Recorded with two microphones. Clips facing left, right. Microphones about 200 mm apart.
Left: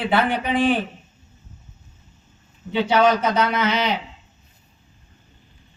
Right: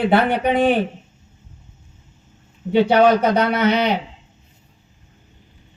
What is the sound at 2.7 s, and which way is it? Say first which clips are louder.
A man's voice: right 4 dB; 55° right (ahead or behind).